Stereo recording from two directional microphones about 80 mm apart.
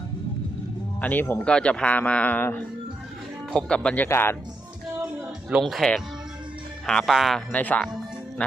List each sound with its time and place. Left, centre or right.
1.0 s speech: left
1.5 s speech: centre
3.5 s speech: centre
4.1 s speech: left
5.6 s speech: centre
7.5 s speech: centre
8.4 s music: centre